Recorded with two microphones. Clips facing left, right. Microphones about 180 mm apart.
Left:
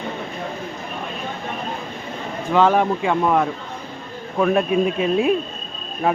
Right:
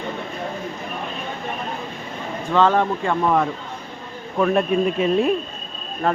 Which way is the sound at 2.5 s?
10° left (ahead or behind).